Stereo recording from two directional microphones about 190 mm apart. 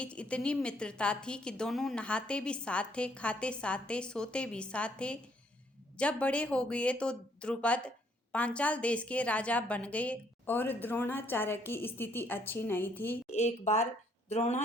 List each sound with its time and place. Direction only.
0.0 s a woman's voice: 5° left (ahead or behind)
13.3 s a woman's voice: 35° left (ahead or behind)